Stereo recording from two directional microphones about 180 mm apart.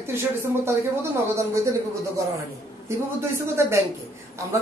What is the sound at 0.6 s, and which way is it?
A man's voice, 15° right (ahead or behind).